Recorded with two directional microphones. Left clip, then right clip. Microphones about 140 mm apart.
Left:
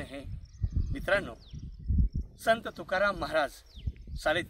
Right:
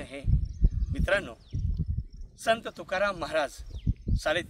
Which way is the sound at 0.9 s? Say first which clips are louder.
Right 1 dB; 25° right (ahead or behind).